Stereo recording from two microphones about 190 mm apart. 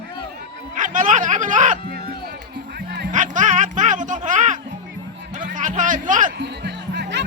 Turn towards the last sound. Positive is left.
turn(degrees=-65)  # may be behind; listen again after turning